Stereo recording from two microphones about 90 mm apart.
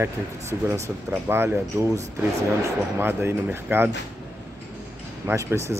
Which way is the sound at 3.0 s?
25° right (ahead or behind).